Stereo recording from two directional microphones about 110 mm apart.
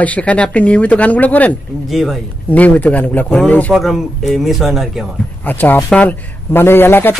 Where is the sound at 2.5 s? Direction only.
15° left (ahead or behind).